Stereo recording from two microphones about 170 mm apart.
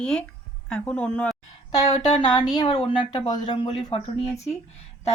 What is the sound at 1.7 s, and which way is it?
Speech, 25° left (ahead or behind).